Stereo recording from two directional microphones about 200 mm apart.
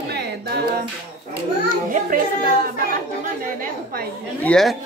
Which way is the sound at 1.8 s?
40° right (ahead or behind).